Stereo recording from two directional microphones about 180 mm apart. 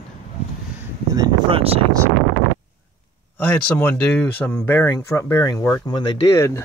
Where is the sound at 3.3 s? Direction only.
10° left (ahead or behind).